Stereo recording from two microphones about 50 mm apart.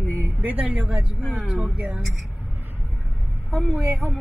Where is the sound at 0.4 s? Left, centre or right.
Right.